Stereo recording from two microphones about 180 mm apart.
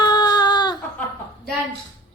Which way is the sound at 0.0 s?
25° left (ahead or behind).